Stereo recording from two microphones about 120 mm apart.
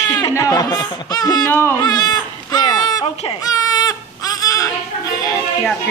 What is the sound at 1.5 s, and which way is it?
Speech, 20° left (ahead or behind).